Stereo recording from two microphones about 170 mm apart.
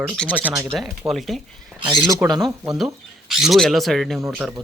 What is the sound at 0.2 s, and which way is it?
Speech, 5° left (ahead or behind).